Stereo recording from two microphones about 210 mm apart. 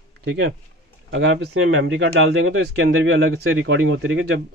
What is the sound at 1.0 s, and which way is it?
Speech, 60° right (ahead or behind).